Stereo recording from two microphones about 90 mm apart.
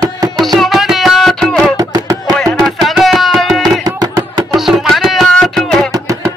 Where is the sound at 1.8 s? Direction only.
40° right (ahead or behind).